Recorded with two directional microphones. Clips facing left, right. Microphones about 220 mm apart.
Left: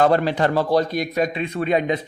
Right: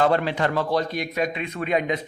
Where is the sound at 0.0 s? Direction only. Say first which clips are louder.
Left 3 dB; 40° left (ahead or behind).